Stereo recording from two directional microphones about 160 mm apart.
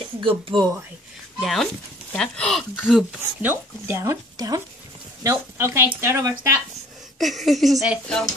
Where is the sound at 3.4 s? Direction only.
15° right (ahead or behind).